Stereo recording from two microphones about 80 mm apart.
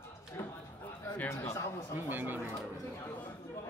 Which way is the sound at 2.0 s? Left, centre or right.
Right.